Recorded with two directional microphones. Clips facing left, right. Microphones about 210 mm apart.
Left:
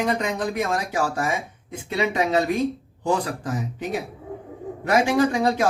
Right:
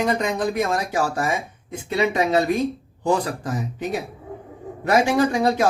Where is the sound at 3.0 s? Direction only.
40° right (ahead or behind).